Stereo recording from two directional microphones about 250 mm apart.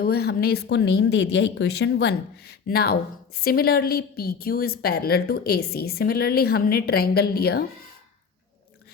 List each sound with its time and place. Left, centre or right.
0.0 s speech: left